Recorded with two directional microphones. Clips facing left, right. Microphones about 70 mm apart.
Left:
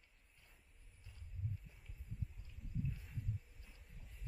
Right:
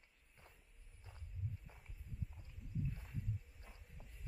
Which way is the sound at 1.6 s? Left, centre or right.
Right.